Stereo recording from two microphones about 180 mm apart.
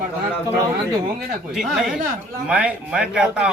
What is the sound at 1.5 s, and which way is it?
Speech, centre (ahead or behind).